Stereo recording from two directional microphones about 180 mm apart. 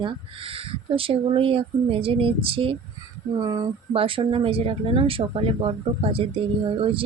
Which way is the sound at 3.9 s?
30° right (ahead or behind).